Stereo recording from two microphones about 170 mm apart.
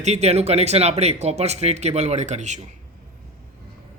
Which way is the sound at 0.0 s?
40° right (ahead or behind).